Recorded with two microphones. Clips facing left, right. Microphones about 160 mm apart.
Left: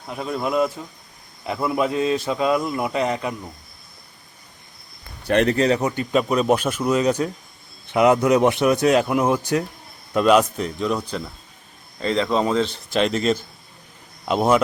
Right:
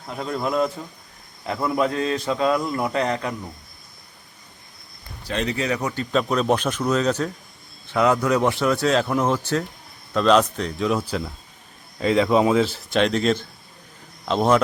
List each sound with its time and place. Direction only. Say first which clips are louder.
0.1 s a man's voice: left 1 dB; 10° left (ahead or behind)
5.2 s speech: left 8 dB; 60° left (ahead or behind)
5.5 s speech: left 6 dB; 35° left (ahead or behind)
5.8 s a man's voice: left 2 dB; 15° left (ahead or behind)